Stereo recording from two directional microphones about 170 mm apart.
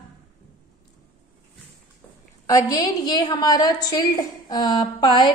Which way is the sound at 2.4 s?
20° left (ahead or behind).